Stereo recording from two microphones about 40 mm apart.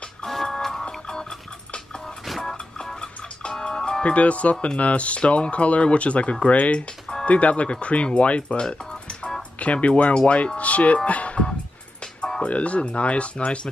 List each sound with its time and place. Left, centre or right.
0.2 s music: centre
0.8 s music: left
2.2 s music: centre
2.8 s music: centre
4.0 s speech: left
11.1 s music: left
12.4 s speech: left